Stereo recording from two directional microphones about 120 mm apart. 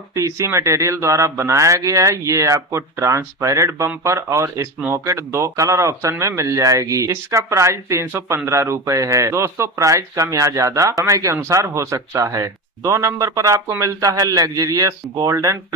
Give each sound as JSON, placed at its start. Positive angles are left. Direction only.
{"t": 0.1, "sound": "speech", "side_deg": -25}